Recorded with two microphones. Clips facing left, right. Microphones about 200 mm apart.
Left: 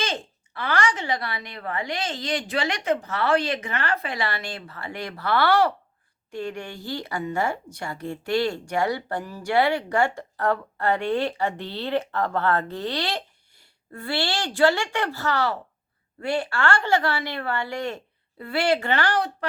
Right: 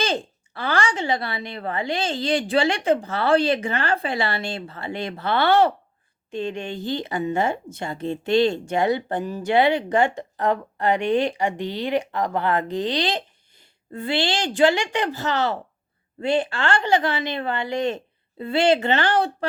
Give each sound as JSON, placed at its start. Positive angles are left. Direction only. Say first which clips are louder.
{"t": 0.0, "sound": "a woman's voice", "louder": "right 5 dB", "side_deg": -30}